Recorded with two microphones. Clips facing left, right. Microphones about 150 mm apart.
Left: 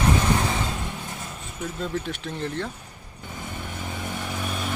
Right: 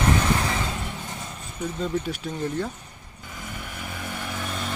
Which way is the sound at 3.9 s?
20° left (ahead or behind).